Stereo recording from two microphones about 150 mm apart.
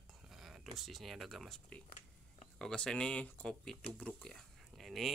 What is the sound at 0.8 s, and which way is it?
Speech, centre (ahead or behind).